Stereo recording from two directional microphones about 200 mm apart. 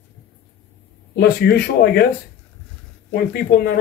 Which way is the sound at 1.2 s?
55° left (ahead or behind).